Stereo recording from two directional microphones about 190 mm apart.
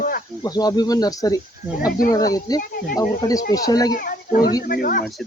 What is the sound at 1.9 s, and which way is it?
Speech, 45° left (ahead or behind).